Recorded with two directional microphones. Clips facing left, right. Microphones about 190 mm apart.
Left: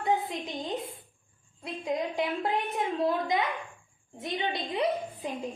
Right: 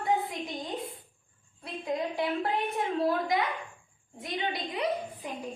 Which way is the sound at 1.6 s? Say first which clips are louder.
Left 1 dB; 20° left (ahead or behind).